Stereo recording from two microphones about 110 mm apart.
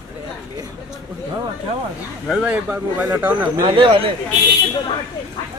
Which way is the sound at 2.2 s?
10° right (ahead or behind).